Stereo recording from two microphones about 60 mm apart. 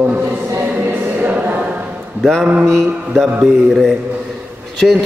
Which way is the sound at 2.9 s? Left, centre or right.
Centre.